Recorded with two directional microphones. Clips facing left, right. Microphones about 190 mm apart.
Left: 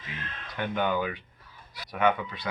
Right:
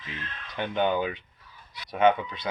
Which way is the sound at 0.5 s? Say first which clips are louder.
Right 2 dB; 25° right (ahead or behind).